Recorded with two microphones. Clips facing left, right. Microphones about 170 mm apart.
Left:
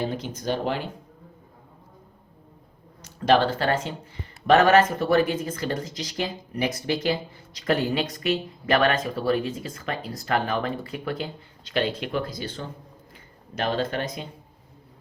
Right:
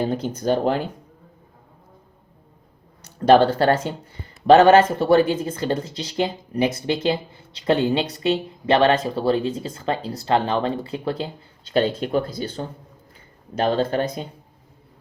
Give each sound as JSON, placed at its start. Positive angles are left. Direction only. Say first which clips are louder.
{"t": 0.0, "sound": "speech", "louder": "right 6 dB", "side_deg": -40}
{"t": 4.4, "sound": "speech", "louder": "right 5 dB", "side_deg": -30}